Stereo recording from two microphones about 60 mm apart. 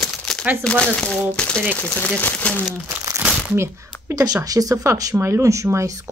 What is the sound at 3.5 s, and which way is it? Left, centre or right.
Speech, right.